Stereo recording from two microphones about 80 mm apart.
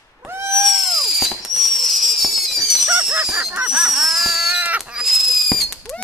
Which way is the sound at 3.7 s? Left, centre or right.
Centre.